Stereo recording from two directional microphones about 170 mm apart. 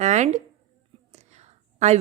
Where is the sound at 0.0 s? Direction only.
40° right (ahead or behind).